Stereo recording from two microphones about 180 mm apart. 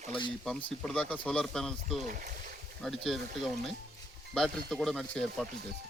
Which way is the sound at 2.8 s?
Centre (ahead or behind).